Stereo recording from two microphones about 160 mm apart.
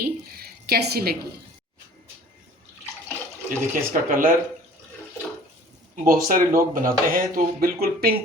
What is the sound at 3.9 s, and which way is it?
Speech, 60° right (ahead or behind).